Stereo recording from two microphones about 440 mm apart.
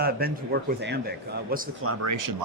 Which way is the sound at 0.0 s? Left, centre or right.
Right.